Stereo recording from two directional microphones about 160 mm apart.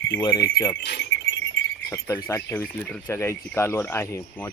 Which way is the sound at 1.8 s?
15° left (ahead or behind).